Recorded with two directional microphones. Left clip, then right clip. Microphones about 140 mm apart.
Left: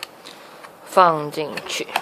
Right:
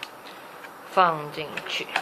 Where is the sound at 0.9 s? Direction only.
90° left.